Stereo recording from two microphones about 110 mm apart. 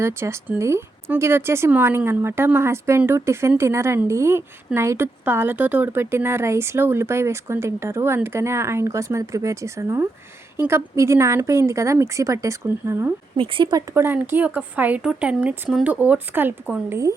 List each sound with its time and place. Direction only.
0.0 s a woman's voice: 25° right (ahead or behind)
13.3 s speech: 50° right (ahead or behind)
13.7 s speech: 35° right (ahead or behind)
14.0 s a woman's voice: 20° right (ahead or behind)